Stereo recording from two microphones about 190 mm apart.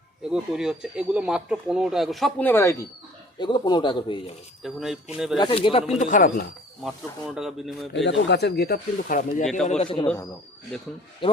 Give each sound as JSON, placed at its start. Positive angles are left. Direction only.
{"t": 0.3, "sound": "speech", "side_deg": -5}
{"t": 3.3, "sound": "speech", "side_deg": 25}
{"t": 4.6, "sound": "speech", "side_deg": 0}
{"t": 5.4, "sound": "speech", "side_deg": 25}
{"t": 5.9, "sound": "speech", "side_deg": 40}
{"t": 6.8, "sound": "speech", "side_deg": -5}
{"t": 8.0, "sound": "speech", "side_deg": 65}
{"t": 9.6, "sound": "a man's voice", "side_deg": 35}
{"t": 11.2, "sound": "speech", "side_deg": 25}